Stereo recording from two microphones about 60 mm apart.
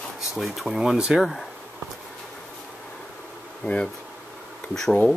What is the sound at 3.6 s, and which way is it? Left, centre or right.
Speech, left.